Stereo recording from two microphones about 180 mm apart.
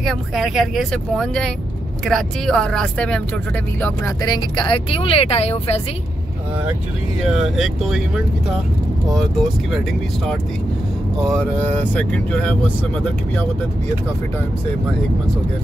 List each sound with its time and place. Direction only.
0.0 s speech: centre (ahead or behind)
3.8 s speech: 20° left (ahead or behind); by 5.8 s 35° left (ahead or behind)
7.2 s speech: centre (ahead or behind)
9.1 s speech: centre (ahead or behind)
11.9 s speech: 10° left (ahead or behind)